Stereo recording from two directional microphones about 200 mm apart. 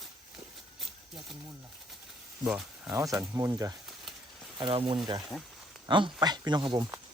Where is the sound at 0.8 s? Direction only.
Centre (ahead or behind).